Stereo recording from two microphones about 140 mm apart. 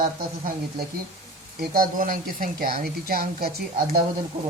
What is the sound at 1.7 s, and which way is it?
Speech, 85° right.